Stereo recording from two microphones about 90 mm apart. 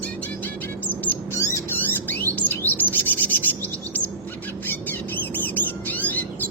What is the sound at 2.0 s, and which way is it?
Chirp, 20° left (ahead or behind).